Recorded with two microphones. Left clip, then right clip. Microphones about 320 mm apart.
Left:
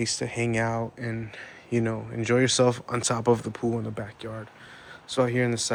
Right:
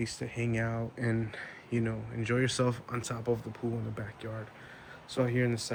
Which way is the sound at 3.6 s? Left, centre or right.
Left.